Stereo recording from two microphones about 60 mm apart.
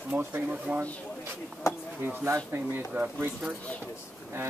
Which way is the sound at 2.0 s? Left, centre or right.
Right.